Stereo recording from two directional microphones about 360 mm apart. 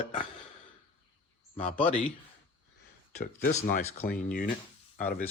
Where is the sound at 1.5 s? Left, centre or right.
Left.